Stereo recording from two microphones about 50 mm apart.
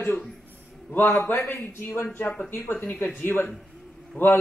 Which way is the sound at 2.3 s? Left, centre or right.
Left.